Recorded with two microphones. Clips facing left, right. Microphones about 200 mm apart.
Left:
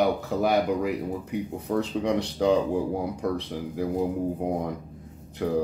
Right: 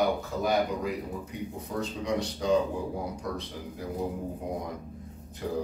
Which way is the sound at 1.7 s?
65° left (ahead or behind).